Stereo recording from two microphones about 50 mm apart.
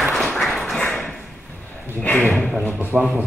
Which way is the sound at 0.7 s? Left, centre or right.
Centre.